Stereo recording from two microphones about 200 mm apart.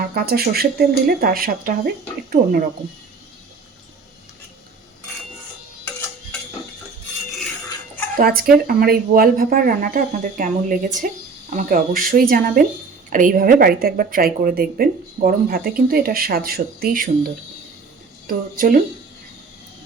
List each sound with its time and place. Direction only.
0.0 s speech: 50° right (ahead or behind)
8.1 s speech: 50° right (ahead or behind)